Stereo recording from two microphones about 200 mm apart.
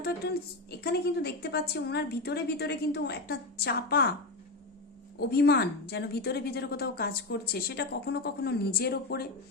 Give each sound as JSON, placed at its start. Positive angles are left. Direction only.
{"t": 0.2, "sound": "a woman's voice", "side_deg": 55}
{"t": 5.2, "sound": "a woman's voice", "side_deg": 55}